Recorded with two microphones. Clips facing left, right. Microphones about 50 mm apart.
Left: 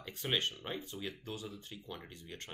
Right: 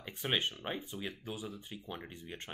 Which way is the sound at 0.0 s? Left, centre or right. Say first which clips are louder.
Right 1 dB; centre.